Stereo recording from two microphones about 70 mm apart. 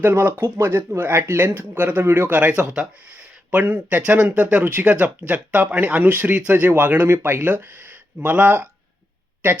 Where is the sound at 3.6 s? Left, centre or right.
Right.